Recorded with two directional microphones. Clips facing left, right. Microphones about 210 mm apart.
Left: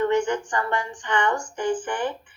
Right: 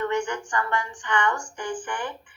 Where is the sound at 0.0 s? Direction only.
25° left (ahead or behind).